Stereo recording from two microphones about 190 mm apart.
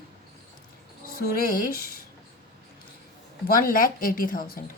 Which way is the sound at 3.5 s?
50° left (ahead or behind).